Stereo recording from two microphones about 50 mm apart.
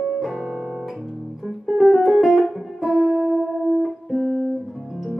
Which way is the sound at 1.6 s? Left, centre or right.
Centre.